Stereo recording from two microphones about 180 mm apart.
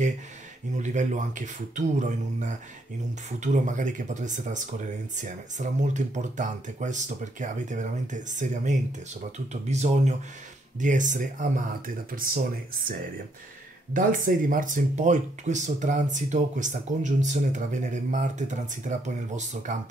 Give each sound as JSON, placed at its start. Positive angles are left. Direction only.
{"t": 0.9, "sound": "speech", "side_deg": -45}
{"t": 13.9, "sound": "speech", "side_deg": -50}